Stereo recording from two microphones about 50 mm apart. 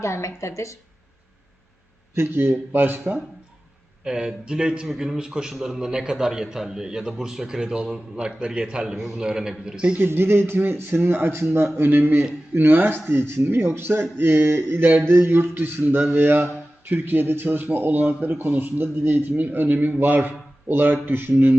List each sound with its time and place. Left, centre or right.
0.0 s a woman's voice: left
2.1 s speech: right
4.0 s a man's voice: centre
10.0 s speech: right
15.2 s speech: right
16.0 s a man's voice: right
16.8 s a man's voice: right